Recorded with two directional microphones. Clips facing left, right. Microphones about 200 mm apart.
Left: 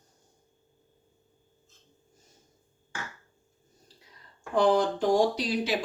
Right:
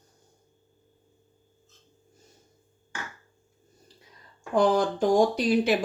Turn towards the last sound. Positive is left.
turn(degrees=-50)  # may be behind; listen again after turning